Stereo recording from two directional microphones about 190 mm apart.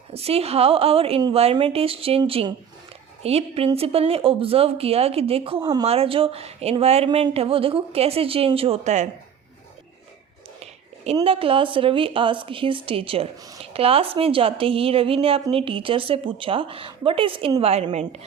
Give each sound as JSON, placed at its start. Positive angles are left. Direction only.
{"t": 0.1, "sound": "a woman's voice", "side_deg": -30}
{"t": 10.6, "sound": "a woman's voice", "side_deg": -35}